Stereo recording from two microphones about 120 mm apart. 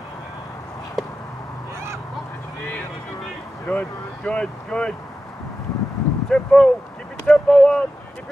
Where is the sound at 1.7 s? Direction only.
20° right (ahead or behind).